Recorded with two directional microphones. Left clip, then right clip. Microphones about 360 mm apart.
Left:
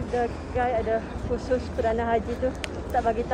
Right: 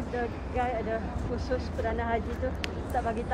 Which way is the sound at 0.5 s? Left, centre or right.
Left.